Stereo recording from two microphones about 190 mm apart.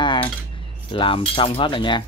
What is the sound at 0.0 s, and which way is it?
Cutlery, 25° left (ahead or behind).